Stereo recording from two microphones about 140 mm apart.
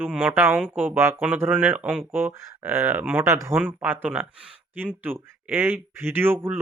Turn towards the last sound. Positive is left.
turn(degrees=-15)  # may be behind; listen again after turning